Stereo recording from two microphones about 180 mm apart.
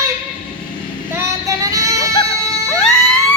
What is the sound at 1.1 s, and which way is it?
Child singing, 15° right (ahead or behind).